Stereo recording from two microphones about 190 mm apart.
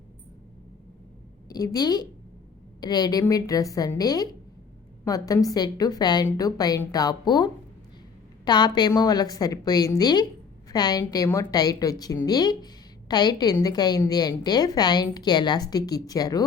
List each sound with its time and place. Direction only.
1.5 s a woman's voice: 20° left (ahead or behind)